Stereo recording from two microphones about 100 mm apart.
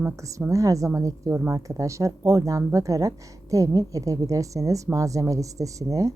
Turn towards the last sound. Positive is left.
turn(degrees=-35)  # may be behind; listen again after turning